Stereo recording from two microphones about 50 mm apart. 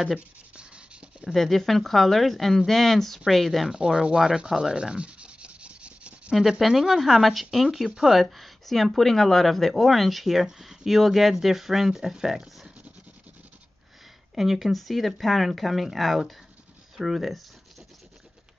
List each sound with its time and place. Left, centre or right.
0.6 s writing: right
1.3 s speech: centre
3.7 s speech: centre
4.5 s rub: centre
6.6 s speech: centre
14.3 s speech: centre